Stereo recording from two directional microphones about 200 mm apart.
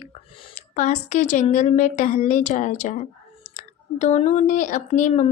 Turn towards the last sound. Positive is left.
turn(degrees=35)  # may be behind; listen again after turning